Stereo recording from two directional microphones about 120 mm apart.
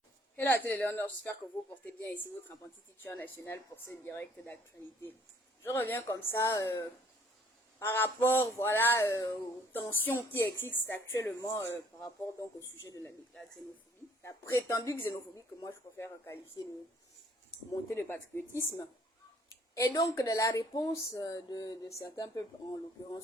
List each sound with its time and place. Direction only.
0.3 s speech: 15° left (ahead or behind)
5.6 s speech: 20° left (ahead or behind)
9.7 s speech: 15° left (ahead or behind)
14.2 s speech: 20° left (ahead or behind)
17.9 s speech: 20° left (ahead or behind)